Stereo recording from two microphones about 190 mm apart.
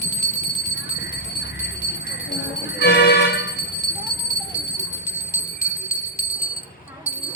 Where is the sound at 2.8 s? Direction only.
60° left (ahead or behind).